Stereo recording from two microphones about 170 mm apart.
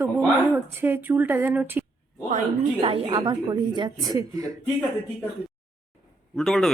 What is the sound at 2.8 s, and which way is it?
A woman's voice, 30° right (ahead or behind).